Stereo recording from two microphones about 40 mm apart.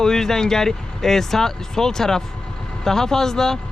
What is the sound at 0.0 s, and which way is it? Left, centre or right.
Speech, centre.